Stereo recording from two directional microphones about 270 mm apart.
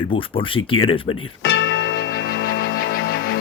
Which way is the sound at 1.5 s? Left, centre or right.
Left.